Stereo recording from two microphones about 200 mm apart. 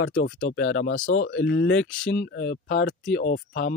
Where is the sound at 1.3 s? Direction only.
60° left (ahead or behind).